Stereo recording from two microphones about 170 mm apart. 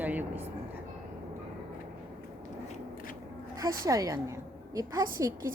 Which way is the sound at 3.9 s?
20° right (ahead or behind).